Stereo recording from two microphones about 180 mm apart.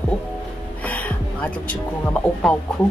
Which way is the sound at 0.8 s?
10° left (ahead or behind).